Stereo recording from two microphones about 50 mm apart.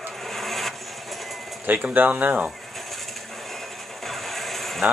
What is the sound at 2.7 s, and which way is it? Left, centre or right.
Vehicle, centre.